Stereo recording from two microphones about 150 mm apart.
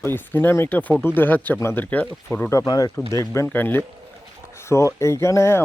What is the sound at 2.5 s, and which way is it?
Speech, 25° left (ahead or behind).